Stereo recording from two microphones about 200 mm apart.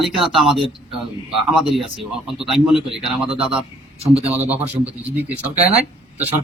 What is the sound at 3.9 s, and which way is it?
Speech, 30° right (ahead or behind).